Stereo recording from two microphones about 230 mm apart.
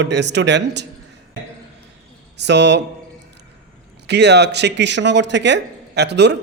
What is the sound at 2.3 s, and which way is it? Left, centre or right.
Speech, right.